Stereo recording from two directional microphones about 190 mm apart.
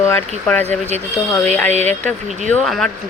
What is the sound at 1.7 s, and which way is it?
Speech, 35° right (ahead or behind).